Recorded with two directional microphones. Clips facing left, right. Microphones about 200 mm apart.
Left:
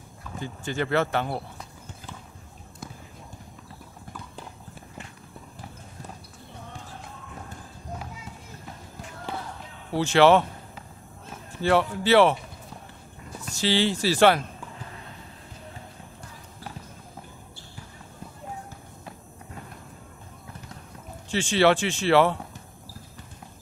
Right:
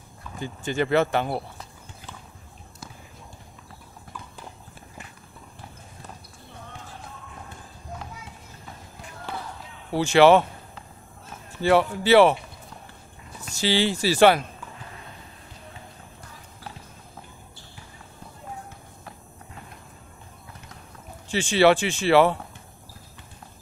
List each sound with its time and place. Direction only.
0.7 s speech: 15° right (ahead or behind)
9.9 s speech: 10° right (ahead or behind)
11.6 s speech: 10° right (ahead or behind)
13.6 s speech: 10° right (ahead or behind)
21.3 s speech: 10° right (ahead or behind)